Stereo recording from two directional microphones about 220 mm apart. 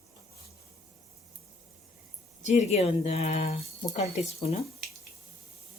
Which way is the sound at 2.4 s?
30° left (ahead or behind).